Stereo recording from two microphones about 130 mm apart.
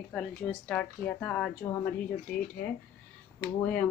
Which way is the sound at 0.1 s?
5° left (ahead or behind).